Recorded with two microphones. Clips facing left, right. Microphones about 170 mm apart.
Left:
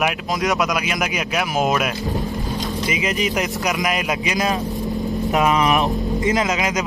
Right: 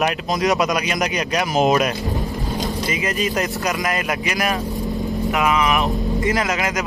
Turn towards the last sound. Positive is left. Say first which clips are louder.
# left 1 dB
turn(degrees=20)  # may be behind; listen again after turning